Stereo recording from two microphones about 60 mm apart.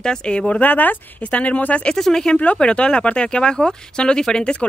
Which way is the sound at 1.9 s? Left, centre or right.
Centre.